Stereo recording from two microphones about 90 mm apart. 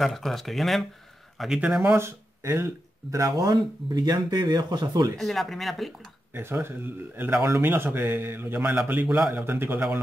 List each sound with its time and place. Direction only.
0.0 s speech: centre (ahead or behind)
1.6 s speech: 10° right (ahead or behind)
2.0 s speech: 30° right (ahead or behind); by 5.2 s 50° right (ahead or behind)
5.2 s speech: centre (ahead or behind)
6.3 s speech: 25° right (ahead or behind)